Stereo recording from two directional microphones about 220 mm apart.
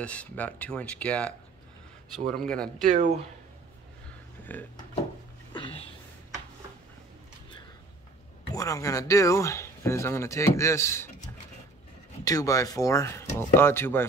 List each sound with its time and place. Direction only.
0.0 s speech: 5° left (ahead or behind)
2.8 s speech: 35° right (ahead or behind)
4.5 s speech: 10° left (ahead or behind)
5.5 s a sound: 25° left (ahead or behind)
8.5 s speech: 15° left (ahead or behind)
12.3 s speech: 15° left (ahead or behind)